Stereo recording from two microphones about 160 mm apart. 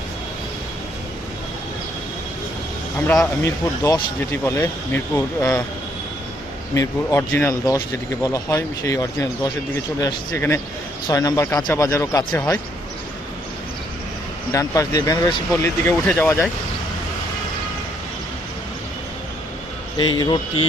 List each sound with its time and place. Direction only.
3.4 s speech: 20° left (ahead or behind)
6.7 s speech: 20° left (ahead or behind)
14.5 s speech: 20° left (ahead or behind)
20.0 s speech: 30° left (ahead or behind)